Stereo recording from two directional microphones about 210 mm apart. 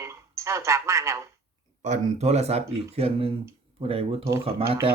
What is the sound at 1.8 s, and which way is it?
Speech, 30° right (ahead or behind).